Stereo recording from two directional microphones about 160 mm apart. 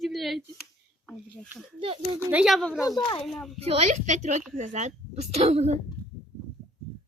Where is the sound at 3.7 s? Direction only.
45° right (ahead or behind).